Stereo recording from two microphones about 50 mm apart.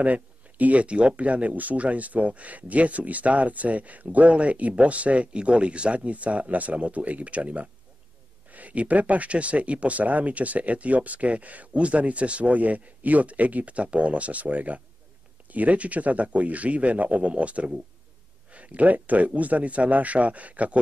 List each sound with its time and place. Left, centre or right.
0.0 s speech: right